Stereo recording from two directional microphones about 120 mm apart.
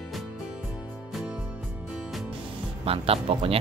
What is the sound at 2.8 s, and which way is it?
Speech, 55° right (ahead or behind).